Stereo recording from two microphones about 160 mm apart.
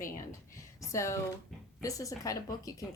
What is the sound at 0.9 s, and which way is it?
Speech, 20° left (ahead or behind).